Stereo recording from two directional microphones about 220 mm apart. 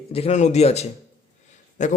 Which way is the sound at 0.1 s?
30° left (ahead or behind).